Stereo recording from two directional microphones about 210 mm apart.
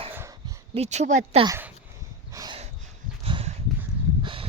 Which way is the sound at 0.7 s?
30° right (ahead or behind).